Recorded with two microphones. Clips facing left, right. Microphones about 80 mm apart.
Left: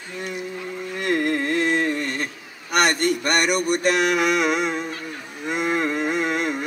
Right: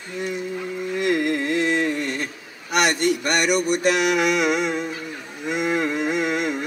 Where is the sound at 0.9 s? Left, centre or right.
Left.